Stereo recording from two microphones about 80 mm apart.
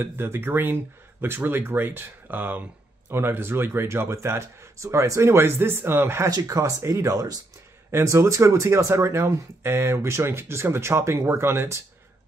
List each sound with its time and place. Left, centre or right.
0.0 s speech: right
6.3 s speech: right